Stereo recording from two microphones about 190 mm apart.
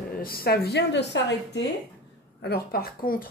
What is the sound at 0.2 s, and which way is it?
A woman's voice, 50° left (ahead or behind).